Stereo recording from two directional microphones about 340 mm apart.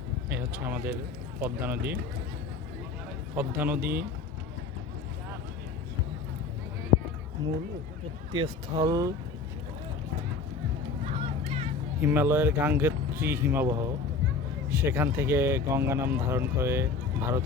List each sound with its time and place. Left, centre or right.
0.3 s a man's voice: centre
3.3 s a man's voice: centre
8.4 s speech: centre
11.0 s vehicle: centre
11.9 s speech: centre